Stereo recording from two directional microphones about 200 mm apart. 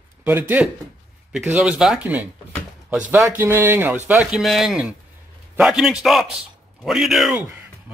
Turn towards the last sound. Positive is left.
turn(degrees=-5)  # may be behind; listen again after turning